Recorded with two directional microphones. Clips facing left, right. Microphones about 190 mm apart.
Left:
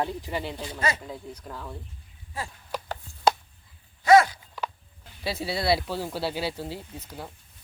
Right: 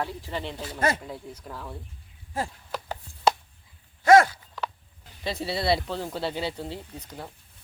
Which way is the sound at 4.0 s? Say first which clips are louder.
Right 1 dB; 45° right (ahead or behind).